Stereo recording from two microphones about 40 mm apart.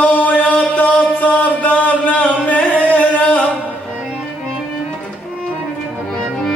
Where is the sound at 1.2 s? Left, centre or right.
Left.